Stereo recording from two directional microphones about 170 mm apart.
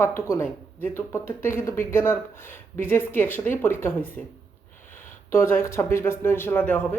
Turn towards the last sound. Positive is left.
turn(degrees=10)  # may be behind; listen again after turning